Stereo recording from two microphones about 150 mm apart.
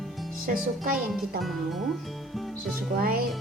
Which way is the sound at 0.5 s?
70° right (ahead or behind).